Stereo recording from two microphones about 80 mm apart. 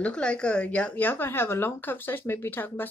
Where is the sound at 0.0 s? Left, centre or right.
Centre.